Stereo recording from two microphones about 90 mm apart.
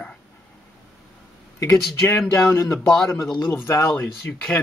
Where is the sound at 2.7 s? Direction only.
5° left (ahead or behind).